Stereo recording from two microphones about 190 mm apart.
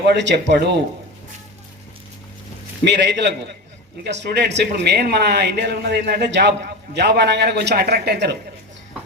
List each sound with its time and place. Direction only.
0.2 s speech: 70° right (ahead or behind)
2.8 s speech: 65° right (ahead or behind)